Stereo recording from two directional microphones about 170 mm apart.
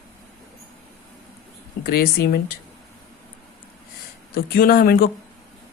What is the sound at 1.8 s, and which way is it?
Speech, 60° left (ahead or behind).